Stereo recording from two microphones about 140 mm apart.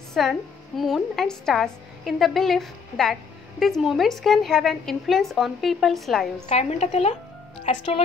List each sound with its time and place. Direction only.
0.1 s a woman's voice: centre (ahead or behind)
6.5 s a woman's voice: 50° left (ahead or behind)